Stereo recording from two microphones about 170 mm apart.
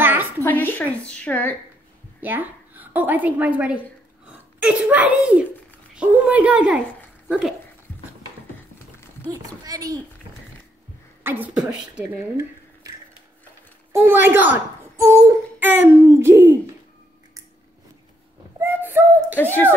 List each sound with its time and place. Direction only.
0.0 s a sound: 10° right (ahead or behind)
0.4 s a woman's voice: 10° left (ahead or behind)
2.1 s a woman's voice: 10° right (ahead or behind)
9.3 s speech: 20° right (ahead or behind)
11.2 s a woman's voice: 10° right (ahead or behind)
12.1 s dishes: 15° right (ahead or behind)
13.9 s a woman's voice: 15° right (ahead or behind)
18.6 s speech: 15° right (ahead or behind)